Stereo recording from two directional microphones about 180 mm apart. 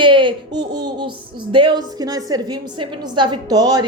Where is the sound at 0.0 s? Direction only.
25° right (ahead or behind).